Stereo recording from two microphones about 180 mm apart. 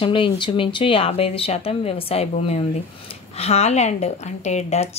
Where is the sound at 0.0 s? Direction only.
30° left (ahead or behind).